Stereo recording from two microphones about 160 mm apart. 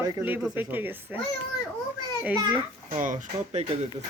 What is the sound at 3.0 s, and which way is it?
Speech, 50° right (ahead or behind).